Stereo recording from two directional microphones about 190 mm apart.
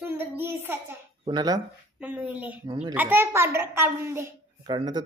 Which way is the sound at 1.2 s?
20° right (ahead or behind).